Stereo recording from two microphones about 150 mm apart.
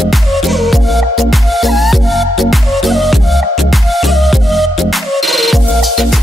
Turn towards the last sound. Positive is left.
turn(degrees=0)  # may be behind; listen again after turning